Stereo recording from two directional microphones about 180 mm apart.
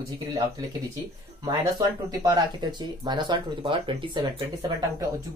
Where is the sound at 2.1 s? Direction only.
20° right (ahead or behind).